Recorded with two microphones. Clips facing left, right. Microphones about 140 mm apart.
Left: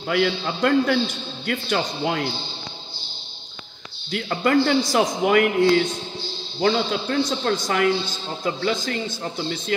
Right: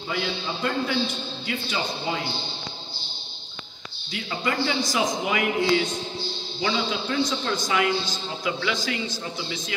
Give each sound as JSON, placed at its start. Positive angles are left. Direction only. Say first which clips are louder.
{"t": 0.1, "sound": "a man's voice", "louder": "left 7 dB", "side_deg": 65}
{"t": 4.1, "sound": "a man's voice", "louder": "left 8 dB", "side_deg": 55}